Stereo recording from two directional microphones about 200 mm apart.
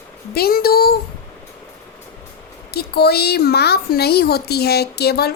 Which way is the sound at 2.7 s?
55° left (ahead or behind).